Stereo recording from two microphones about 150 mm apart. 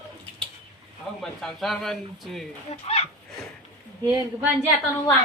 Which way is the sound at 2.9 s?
45° left (ahead or behind).